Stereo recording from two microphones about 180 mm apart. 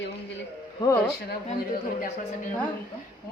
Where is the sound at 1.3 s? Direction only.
50° left (ahead or behind).